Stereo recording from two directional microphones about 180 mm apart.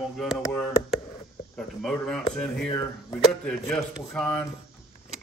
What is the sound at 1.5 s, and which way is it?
A man's voice, centre (ahead or behind).